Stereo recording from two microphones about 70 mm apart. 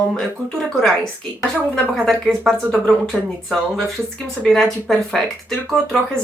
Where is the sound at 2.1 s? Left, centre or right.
Centre.